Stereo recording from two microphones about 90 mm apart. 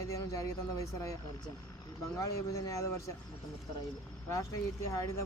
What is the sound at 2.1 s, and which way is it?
Speech, 35° left (ahead or behind).